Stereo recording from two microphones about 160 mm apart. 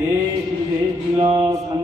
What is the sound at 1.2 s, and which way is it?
Mantra, 20° right (ahead or behind).